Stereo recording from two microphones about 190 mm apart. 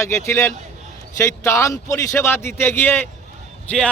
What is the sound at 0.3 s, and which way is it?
Speech, 15° left (ahead or behind).